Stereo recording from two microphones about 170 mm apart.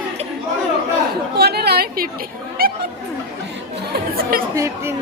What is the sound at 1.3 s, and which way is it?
Speech, 70° right (ahead or behind).